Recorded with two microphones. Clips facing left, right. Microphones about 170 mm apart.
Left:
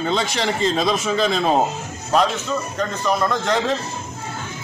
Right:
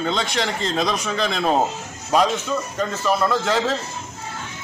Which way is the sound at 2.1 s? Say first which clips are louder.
Even; 10° right (ahead or behind).